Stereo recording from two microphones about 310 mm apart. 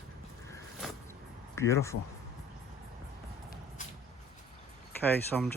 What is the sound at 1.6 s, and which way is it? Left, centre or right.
Speech, centre.